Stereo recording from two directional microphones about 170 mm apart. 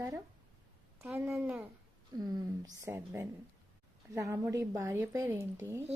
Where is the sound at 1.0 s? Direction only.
10° right (ahead or behind).